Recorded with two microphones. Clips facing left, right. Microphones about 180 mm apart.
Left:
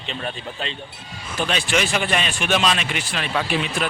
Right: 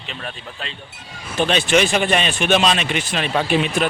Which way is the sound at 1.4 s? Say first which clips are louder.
Right 6 dB; 25° right (ahead or behind).